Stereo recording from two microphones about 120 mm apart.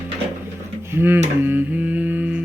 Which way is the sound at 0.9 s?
20° right (ahead or behind).